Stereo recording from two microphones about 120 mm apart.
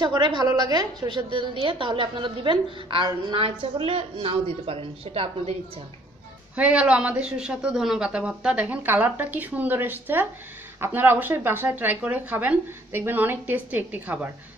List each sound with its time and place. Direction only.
0.0 s a woman's voice: 40° right (ahead or behind); by 5.6 s 55° right (ahead or behind)
6.5 s speech: 10° right (ahead or behind)